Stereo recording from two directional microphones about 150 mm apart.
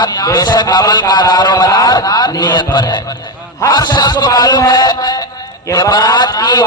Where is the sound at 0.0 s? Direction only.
25° left (ahead or behind).